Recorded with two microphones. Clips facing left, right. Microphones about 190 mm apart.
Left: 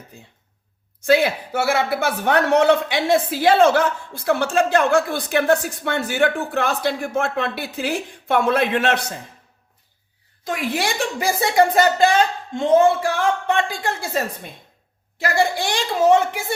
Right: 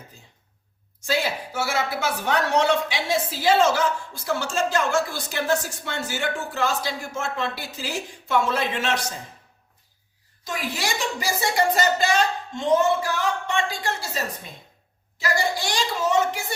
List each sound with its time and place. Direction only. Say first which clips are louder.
1.0 s speech: left 8 dB; 60° left (ahead or behind)
10.4 s speech: left 6 dB; 55° left (ahead or behind)
15.2 s speech: left 5 dB; 55° left (ahead or behind)